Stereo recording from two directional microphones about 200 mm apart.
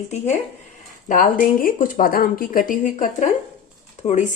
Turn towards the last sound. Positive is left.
turn(degrees=35)  # may be behind; listen again after turning